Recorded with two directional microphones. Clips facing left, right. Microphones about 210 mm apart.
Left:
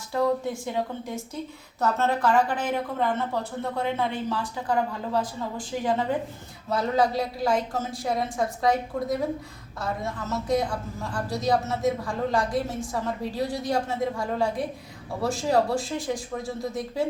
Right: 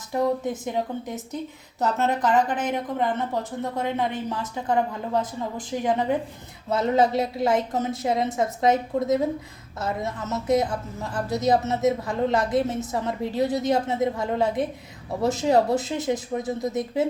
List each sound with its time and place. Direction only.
0.1 s speech: 20° right (ahead or behind)